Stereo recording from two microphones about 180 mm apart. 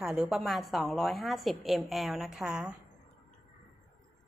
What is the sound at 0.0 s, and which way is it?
A woman's voice, centre (ahead or behind).